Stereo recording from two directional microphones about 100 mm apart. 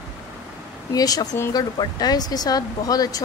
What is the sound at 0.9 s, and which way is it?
Speech, 40° left (ahead or behind).